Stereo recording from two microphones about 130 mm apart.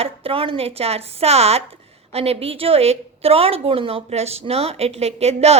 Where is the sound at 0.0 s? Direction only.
45° right (ahead or behind).